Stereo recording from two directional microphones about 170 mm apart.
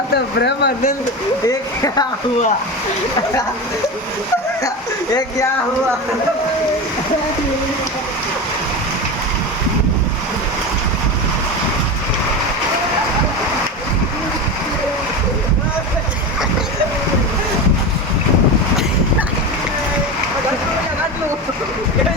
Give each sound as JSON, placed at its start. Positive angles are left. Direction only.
{"t": 0.1, "sound": "speech", "side_deg": 75}
{"t": 1.5, "sound": "speech", "side_deg": 20}